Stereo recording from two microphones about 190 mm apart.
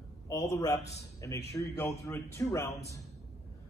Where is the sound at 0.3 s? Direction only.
15° left (ahead or behind).